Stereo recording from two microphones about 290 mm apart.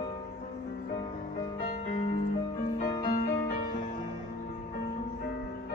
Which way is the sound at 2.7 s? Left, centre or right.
Left.